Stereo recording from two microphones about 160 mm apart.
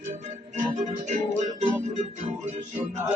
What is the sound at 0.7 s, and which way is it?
Music, 45° right (ahead or behind).